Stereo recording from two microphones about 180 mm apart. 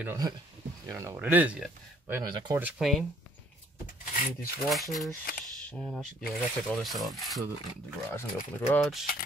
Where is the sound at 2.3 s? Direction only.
25° right (ahead or behind).